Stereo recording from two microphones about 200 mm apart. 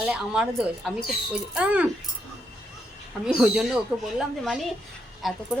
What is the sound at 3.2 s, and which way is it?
Speech, 5° right (ahead or behind).